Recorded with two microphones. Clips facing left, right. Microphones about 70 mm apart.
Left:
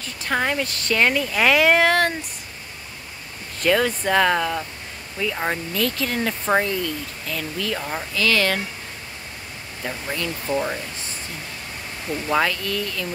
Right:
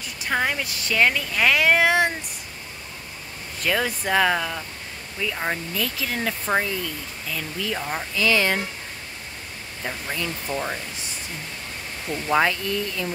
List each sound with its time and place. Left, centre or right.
0.0 s speech: centre
3.5 s speech: centre
7.9 s speech: centre
9.8 s speech: centre
10.5 s speech: centre
12.1 s speech: centre
12.4 s speech: right